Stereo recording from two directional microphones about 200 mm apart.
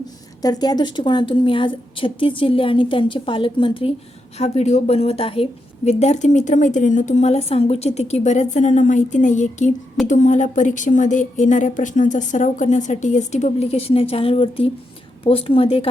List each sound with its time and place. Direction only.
0.4 s a woman's voice: 20° left (ahead or behind)